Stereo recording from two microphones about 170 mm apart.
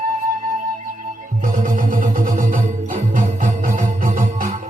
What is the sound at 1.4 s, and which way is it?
Music, 50° right (ahead or behind).